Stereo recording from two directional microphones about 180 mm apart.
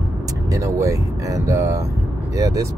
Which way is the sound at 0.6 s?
15° right (ahead or behind).